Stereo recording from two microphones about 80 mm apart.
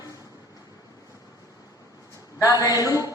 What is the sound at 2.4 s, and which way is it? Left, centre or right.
Speech, left.